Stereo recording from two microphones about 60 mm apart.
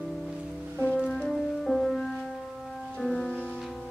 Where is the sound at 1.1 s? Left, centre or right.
Centre.